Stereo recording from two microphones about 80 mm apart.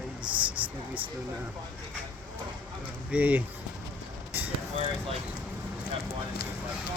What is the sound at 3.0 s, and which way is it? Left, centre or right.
Speech, centre.